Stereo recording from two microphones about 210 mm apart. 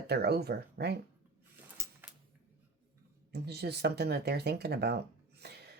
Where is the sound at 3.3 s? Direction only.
50° right (ahead or behind).